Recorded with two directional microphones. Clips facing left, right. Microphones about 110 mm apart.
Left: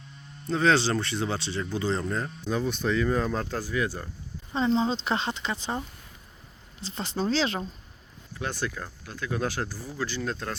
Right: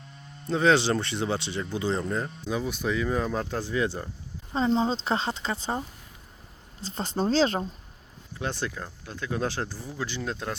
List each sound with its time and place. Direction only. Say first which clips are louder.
0.4 s speech: right 1 dB; 20° right (ahead or behind)
4.8 s speech: right 1 dB; 35° right (ahead or behind)
6.8 s speech: right 2 dB; 45° right (ahead or behind)
8.4 s speech: even; 25° right (ahead or behind)